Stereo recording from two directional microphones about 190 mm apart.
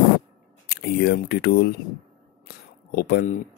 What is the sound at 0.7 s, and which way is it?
Speech, 55° left (ahead or behind).